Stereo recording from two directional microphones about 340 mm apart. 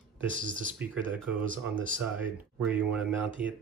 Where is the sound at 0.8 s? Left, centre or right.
Centre.